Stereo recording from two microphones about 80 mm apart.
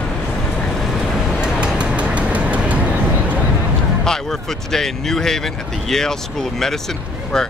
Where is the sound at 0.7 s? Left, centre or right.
Centre.